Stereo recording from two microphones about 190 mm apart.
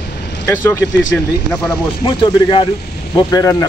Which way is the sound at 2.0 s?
25° left (ahead or behind).